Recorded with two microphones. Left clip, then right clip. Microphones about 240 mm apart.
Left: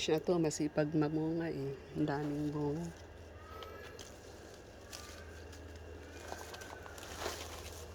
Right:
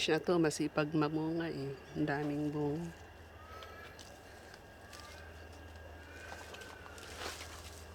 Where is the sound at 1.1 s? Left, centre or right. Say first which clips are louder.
Even; right.